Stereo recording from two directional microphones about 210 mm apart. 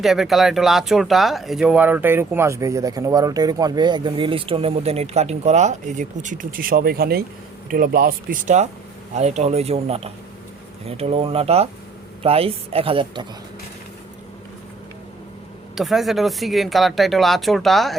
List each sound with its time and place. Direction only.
0.0 s a woman's voice: centre (ahead or behind); by 13.2 s 25° right (ahead or behind)
15.7 s speech: centre (ahead or behind)